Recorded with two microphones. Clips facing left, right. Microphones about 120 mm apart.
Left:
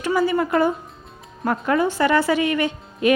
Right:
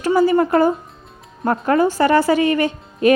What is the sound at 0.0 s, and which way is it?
A woman's voice, 40° right (ahead or behind).